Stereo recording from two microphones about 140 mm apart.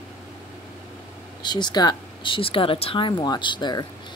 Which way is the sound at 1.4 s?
30° left (ahead or behind).